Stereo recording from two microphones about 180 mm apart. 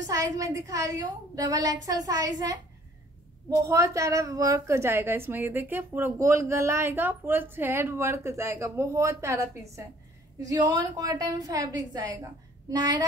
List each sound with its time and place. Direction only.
0.0 s a woman's voice: 20° right (ahead or behind)